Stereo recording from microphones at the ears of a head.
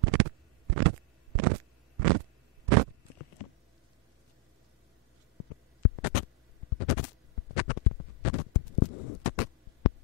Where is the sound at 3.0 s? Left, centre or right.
Left.